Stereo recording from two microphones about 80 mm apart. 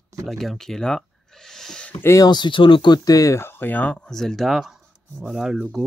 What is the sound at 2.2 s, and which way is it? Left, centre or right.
Speech, left.